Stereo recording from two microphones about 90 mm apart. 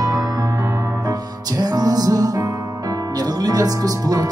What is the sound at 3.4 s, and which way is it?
Music, 45° right (ahead or behind).